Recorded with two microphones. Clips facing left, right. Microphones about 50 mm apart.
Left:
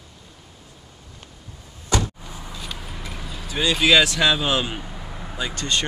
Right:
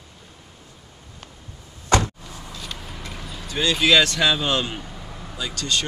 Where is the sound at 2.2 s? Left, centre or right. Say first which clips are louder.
Left 1 dB; centre.